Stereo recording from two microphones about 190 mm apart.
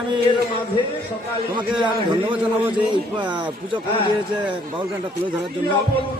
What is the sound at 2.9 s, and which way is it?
Speech, 25° right (ahead or behind).